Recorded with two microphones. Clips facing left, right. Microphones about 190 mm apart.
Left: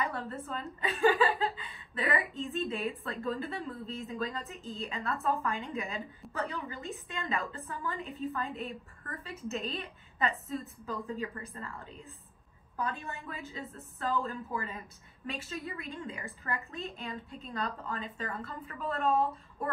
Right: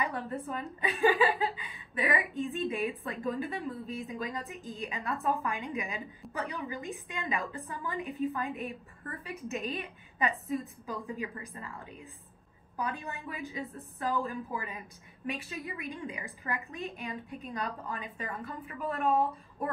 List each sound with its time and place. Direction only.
0.0 s speech: 15° right (ahead or behind)